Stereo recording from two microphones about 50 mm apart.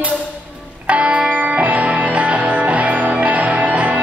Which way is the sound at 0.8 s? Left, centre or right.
Right.